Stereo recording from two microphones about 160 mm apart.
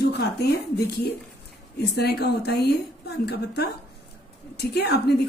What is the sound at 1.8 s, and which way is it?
Speech, 90° left.